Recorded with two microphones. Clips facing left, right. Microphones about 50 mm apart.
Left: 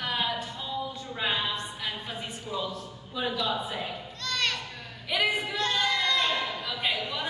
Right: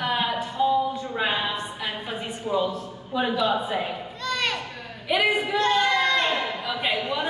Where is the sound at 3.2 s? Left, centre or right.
Right.